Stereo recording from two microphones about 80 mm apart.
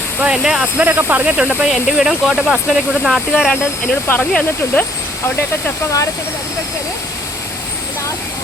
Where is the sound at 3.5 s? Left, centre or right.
Centre.